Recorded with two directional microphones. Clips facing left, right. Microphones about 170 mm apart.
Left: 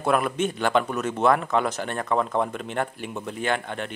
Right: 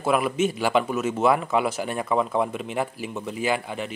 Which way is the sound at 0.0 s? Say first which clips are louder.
Right 1 dB; 5° right (ahead or behind).